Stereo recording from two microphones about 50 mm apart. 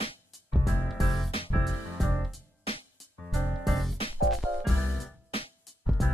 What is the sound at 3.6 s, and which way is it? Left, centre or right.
Music, centre.